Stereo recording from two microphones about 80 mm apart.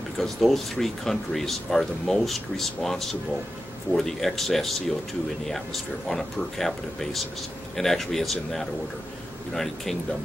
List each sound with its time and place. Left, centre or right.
0.2 s speech: centre